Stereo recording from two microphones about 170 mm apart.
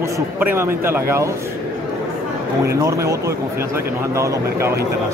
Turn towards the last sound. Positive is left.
turn(degrees=-15)  # may be behind; listen again after turning